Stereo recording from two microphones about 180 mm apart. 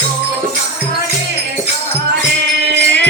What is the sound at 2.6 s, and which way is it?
Music, 70° right (ahead or behind).